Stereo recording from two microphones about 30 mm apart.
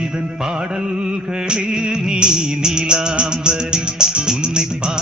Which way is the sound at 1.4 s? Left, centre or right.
Right.